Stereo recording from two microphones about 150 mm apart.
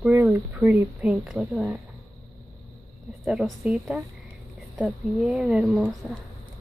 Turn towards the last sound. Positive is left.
turn(degrees=-5)  # may be behind; listen again after turning